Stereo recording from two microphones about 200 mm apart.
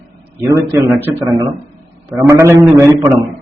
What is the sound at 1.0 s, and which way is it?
A man's voice, 20° right (ahead or behind).